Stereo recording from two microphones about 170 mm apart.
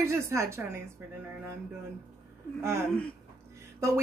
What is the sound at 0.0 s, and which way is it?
Speech, 15° right (ahead or behind).